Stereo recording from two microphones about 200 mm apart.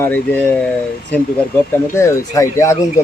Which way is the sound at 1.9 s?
15° left (ahead or behind).